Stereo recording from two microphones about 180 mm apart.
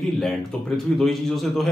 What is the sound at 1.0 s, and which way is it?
Speech, centre (ahead or behind).